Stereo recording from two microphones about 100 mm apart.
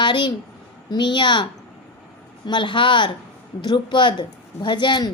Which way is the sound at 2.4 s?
50° left (ahead or behind).